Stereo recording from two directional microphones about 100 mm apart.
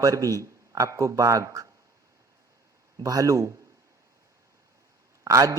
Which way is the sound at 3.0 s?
35° right (ahead or behind).